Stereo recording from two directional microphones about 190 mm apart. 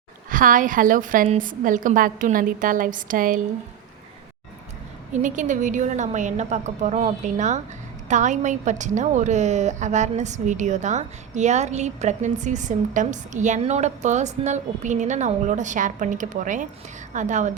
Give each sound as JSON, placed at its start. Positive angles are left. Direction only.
{"t": 0.3, "sound": "a woman's voice", "side_deg": -45}
{"t": 5.1, "sound": "a woman's voice", "side_deg": -40}